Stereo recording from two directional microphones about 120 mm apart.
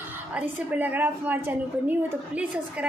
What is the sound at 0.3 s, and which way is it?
A woman's voice, 10° right (ahead or behind).